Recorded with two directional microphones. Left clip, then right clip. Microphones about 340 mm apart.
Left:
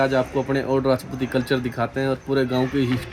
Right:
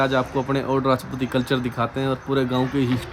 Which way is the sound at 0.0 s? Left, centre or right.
Centre.